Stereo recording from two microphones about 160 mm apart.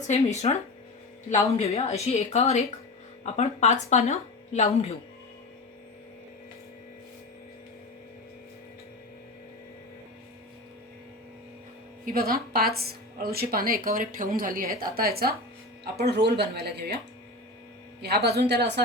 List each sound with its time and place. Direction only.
0.1 s speech: 45° left (ahead or behind)
12.0 s a woman's voice: 65° right (ahead or behind)
15.8 s speech: 90° right
18.0 s speech: 85° right